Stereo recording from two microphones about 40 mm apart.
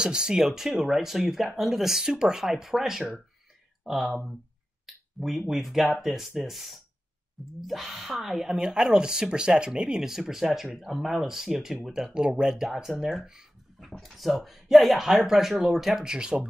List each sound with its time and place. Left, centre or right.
0.0 s speech: centre
0.5 s speech: centre
2.5 s speech: centre
4.8 s a sound: centre
5.5 s speech: centre
8.5 s speech: centre
10.0 s speech: centre
12.1 s speech: right